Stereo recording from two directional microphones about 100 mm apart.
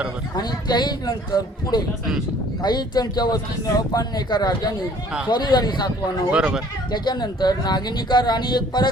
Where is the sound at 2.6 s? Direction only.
45° left (ahead or behind).